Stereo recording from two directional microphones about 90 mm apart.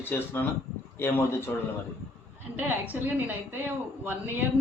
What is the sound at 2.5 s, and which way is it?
Speech, 20° right (ahead or behind).